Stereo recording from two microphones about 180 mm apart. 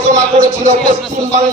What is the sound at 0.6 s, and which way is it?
Music, 45° right (ahead or behind).